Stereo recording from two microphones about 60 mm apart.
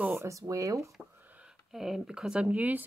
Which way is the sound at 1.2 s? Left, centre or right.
Right.